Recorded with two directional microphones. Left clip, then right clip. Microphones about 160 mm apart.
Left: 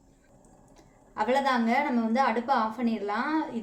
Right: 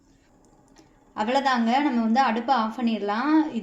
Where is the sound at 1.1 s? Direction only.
50° right (ahead or behind).